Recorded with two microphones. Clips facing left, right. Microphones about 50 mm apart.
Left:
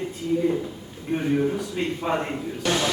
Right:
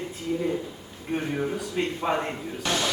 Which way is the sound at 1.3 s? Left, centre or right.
Centre.